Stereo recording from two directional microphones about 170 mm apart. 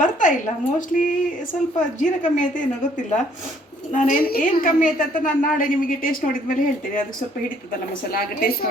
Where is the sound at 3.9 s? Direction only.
50° left (ahead or behind).